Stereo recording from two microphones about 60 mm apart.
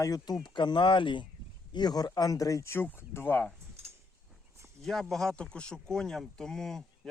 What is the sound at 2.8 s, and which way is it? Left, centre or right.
Speech, left.